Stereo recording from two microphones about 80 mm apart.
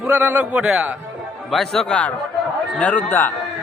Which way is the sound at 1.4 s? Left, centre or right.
Centre.